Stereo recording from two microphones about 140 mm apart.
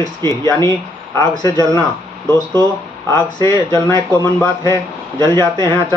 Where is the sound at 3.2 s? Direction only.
30° left (ahead or behind).